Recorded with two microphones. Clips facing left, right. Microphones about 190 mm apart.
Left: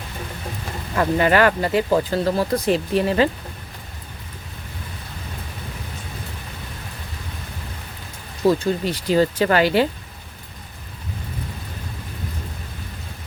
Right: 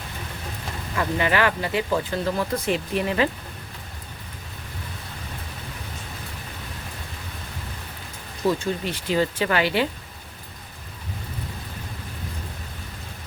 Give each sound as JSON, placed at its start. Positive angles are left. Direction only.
{"t": 0.9, "sound": "speech", "side_deg": 45}
{"t": 8.4, "sound": "speech", "side_deg": 35}